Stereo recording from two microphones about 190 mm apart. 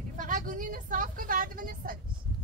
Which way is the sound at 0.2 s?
45° right (ahead or behind).